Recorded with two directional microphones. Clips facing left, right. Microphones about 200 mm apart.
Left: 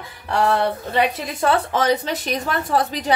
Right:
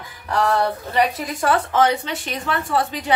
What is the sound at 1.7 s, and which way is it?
Speech, 35° left (ahead or behind).